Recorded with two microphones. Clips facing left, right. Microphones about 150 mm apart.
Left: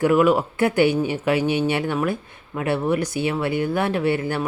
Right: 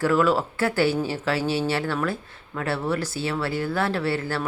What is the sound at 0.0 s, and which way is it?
Speech, 15° left (ahead or behind).